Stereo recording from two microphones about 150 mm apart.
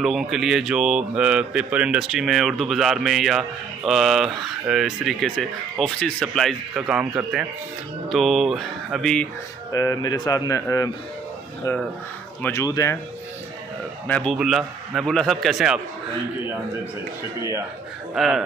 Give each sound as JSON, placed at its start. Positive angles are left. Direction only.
{"t": 0.0, "sound": "a man's voice", "side_deg": 0}
{"t": 9.7, "sound": "speech", "side_deg": 25}
{"t": 12.4, "sound": "a man's voice", "side_deg": 10}
{"t": 14.0, "sound": "a man's voice", "side_deg": 10}
{"t": 14.3, "sound": "speech", "side_deg": 0}
{"t": 18.1, "sound": "speech", "side_deg": 0}